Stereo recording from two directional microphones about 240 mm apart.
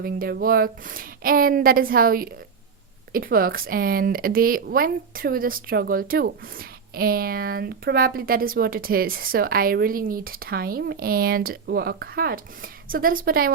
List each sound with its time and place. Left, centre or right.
0.0 s speech: right